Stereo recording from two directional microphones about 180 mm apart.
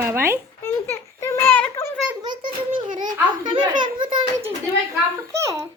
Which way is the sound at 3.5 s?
25° right (ahead or behind).